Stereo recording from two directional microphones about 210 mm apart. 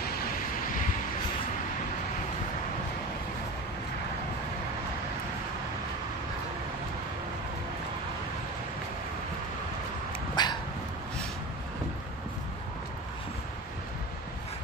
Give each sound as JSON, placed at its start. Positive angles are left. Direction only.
{"t": 0.0, "sound": "vehicle", "side_deg": 40}
{"t": 10.3, "sound": "dog", "side_deg": 20}